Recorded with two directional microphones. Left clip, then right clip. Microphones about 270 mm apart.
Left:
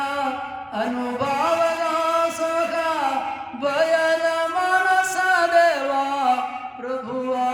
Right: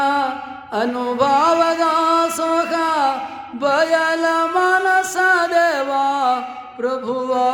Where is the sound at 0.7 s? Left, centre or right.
Centre.